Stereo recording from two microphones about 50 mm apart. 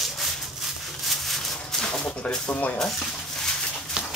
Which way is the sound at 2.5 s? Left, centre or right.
Left.